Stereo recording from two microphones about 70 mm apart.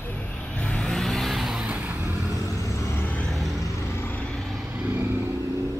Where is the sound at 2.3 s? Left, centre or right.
Left.